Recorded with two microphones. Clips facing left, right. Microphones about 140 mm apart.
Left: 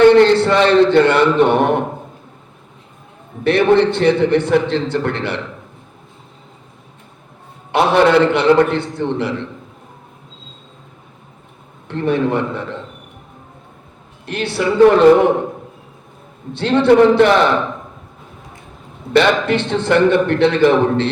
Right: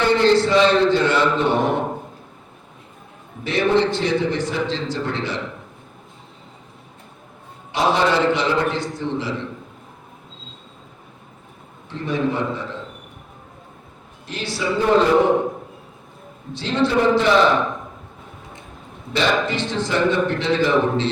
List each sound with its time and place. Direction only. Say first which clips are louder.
0.0 s a man's voice: left 7 dB; 60° left (ahead or behind)
3.4 s a man's voice: left 6 dB; 60° left (ahead or behind)
7.7 s a man's voice: left 7 dB; 60° left (ahead or behind)
11.9 s a man's voice: left 6 dB; 60° left (ahead or behind)
14.3 s a man's voice: left 6 dB; 60° left (ahead or behind)
16.5 s a man's voice: left 8 dB; 60° left (ahead or behind)
19.1 s a man's voice: left 7 dB; 60° left (ahead or behind)